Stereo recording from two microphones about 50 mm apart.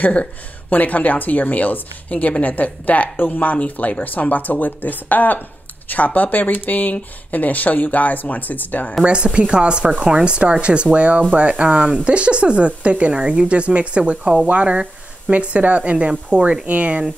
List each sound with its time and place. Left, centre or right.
0.0 s speech: left
9.0 s speech: right